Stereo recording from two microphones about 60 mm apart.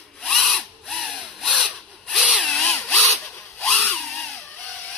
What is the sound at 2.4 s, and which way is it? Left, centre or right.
Tools, centre.